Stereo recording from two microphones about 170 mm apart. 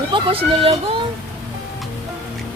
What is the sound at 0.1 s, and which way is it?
Speech, 30° right (ahead or behind).